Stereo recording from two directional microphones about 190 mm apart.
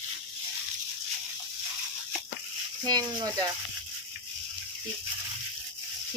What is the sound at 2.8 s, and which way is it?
Speech, 20° right (ahead or behind).